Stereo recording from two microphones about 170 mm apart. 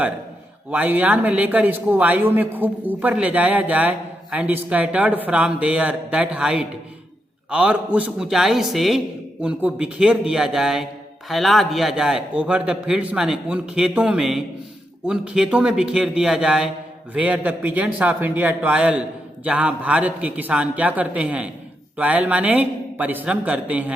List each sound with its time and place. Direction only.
0.7 s a man's voice: 10° right (ahead or behind)